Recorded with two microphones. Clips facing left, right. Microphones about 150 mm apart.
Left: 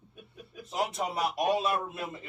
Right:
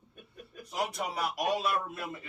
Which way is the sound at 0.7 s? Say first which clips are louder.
Left 2 dB; 25° left (ahead or behind).